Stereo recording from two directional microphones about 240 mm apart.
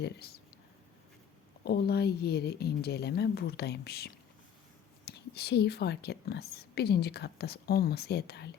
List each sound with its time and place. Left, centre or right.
0.0 s speech: left
1.6 s speech: left